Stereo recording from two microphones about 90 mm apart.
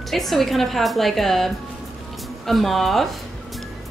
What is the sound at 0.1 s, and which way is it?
Speech, centre (ahead or behind).